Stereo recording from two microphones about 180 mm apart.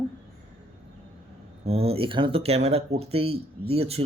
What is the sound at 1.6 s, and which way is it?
A man's voice, 35° right (ahead or behind).